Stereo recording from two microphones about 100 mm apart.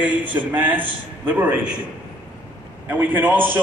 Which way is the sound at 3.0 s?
15° right (ahead or behind).